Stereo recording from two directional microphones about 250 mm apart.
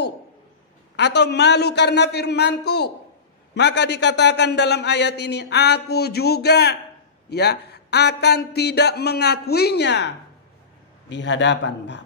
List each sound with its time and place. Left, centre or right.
0.9 s a man's voice: left